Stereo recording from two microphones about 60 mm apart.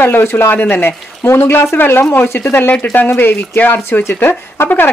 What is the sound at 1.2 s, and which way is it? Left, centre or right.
Speech, left.